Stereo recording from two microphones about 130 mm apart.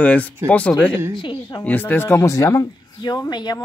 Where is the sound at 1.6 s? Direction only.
15° left (ahead or behind).